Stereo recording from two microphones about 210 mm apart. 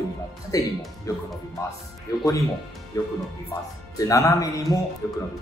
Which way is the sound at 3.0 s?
15° left (ahead or behind).